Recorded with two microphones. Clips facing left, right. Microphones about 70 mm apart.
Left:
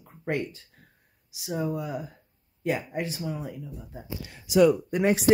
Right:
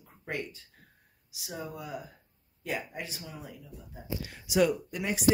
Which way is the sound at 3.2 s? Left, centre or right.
Left.